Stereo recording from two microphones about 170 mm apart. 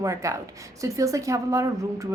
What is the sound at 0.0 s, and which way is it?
A woman's voice, 20° right (ahead or behind).